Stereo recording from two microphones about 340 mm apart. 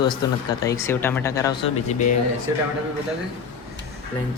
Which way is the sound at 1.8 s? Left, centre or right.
Left.